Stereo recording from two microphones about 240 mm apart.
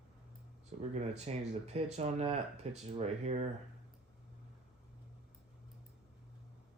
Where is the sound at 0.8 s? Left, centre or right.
Right.